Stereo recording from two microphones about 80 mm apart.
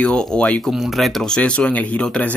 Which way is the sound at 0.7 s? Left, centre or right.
Centre.